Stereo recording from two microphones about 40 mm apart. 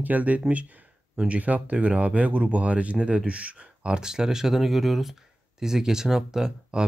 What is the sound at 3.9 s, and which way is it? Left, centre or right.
Speech, centre.